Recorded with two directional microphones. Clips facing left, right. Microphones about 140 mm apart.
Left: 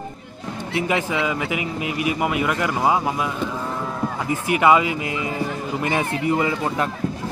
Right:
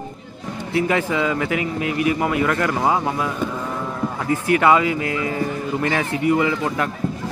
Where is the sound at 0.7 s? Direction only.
15° left (ahead or behind).